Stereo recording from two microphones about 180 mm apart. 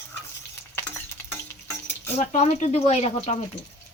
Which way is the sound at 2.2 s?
40° left (ahead or behind).